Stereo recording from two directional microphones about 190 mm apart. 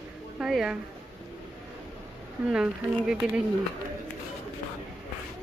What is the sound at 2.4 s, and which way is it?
Speech, 5° right (ahead or behind).